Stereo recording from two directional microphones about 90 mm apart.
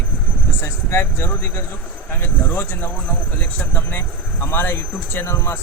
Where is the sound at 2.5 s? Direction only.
25° left (ahead or behind).